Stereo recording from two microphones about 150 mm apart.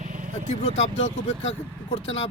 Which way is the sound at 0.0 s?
60° right (ahead or behind).